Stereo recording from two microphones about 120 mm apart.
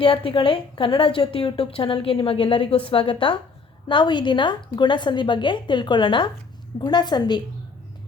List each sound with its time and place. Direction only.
0.0 s a woman's voice: 50° left (ahead or behind)